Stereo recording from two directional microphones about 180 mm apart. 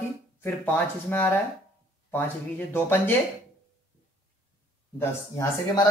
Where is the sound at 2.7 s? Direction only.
10° left (ahead or behind).